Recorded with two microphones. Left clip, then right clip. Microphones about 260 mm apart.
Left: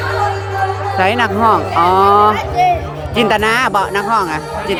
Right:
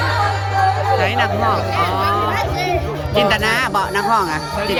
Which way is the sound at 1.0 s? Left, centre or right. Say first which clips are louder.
Left 4 dB; centre.